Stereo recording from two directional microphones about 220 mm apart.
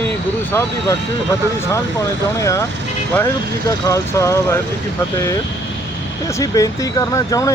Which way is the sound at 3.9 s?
15° left (ahead or behind).